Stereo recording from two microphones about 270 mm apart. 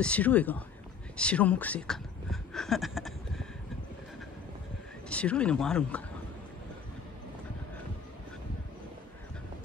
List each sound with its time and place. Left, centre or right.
0.0 s speech: centre
2.5 s a sound: centre
5.1 s speech: centre